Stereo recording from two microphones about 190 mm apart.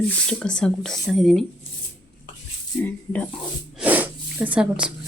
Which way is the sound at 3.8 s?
10° right (ahead or behind).